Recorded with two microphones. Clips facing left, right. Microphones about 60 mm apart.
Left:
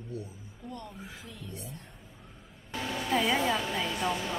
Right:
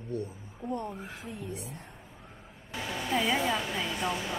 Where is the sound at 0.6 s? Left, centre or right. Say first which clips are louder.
Right 8 dB; right.